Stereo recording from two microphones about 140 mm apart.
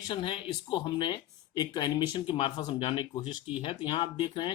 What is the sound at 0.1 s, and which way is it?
Speech, 35° left (ahead or behind).